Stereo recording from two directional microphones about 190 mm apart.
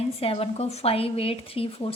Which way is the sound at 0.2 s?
30° left (ahead or behind).